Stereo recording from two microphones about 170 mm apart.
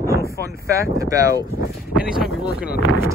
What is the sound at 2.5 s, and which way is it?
Speech, 65° left (ahead or behind).